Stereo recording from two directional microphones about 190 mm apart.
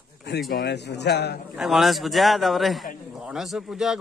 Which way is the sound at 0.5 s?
60° left (ahead or behind).